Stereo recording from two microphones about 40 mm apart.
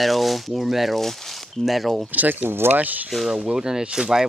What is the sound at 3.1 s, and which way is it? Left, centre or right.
Speech, centre.